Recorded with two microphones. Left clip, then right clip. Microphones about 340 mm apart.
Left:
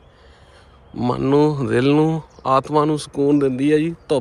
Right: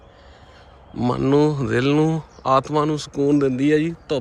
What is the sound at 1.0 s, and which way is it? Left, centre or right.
Speech, centre.